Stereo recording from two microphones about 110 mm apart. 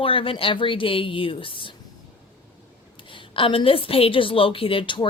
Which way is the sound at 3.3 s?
50° left (ahead or behind).